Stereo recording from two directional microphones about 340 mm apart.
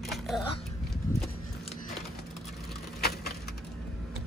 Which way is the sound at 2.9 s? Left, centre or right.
Left.